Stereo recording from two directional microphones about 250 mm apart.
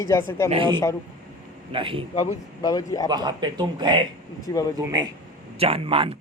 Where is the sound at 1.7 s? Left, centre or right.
Right.